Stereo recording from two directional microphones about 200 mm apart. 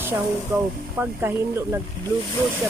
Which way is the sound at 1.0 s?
10° right (ahead or behind).